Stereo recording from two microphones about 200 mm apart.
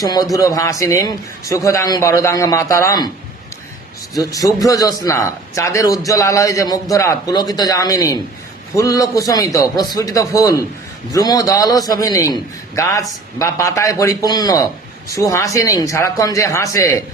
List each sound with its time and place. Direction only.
0.0 s a man's voice: 20° left (ahead or behind)
4.2 s a man's voice: 15° left (ahead or behind)